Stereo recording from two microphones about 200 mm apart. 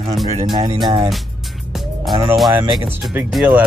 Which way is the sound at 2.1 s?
15° right (ahead or behind).